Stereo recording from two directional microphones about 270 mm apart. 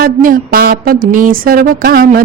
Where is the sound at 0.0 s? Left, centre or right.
Right.